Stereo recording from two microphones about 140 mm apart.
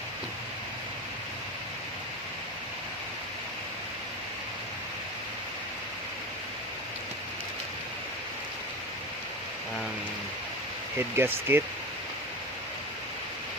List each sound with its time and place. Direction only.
10.9 s speech: 15° right (ahead or behind)